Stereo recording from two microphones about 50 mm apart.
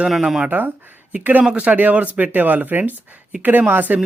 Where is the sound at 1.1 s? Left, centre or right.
Right.